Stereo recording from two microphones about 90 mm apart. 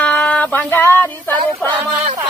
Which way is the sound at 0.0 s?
15° left (ahead or behind).